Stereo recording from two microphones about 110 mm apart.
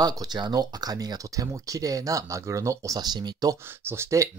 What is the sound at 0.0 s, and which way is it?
Speech, 35° right (ahead or behind).